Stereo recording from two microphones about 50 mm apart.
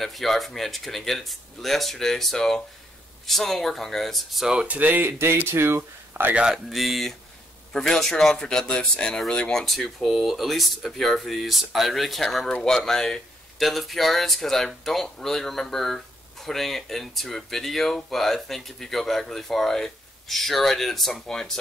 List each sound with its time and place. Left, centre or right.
0.0 s speech: centre
4.6 s speech: right
5.0 s speech: right
6.3 s speech: centre
6.7 s speech: centre
9.6 s speech: centre